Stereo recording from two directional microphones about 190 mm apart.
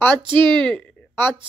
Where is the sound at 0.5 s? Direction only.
5° left (ahead or behind).